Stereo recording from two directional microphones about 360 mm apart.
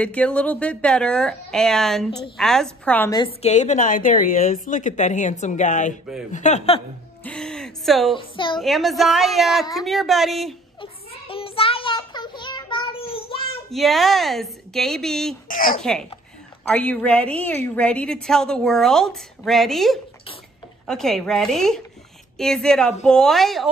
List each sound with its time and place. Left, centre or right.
0.0 s a woman's voice: centre
2.0 s a woman's voice: centre
2.3 s a woman's voice: centre
7.2 s speech: centre
8.2 s a woman's voice: centre
8.5 s a woman's voice: centre
10.8 s child singing: centre
13.7 s a woman's voice: centre
15.4 s a woman's voice: left
15.8 s a woman's voice: centre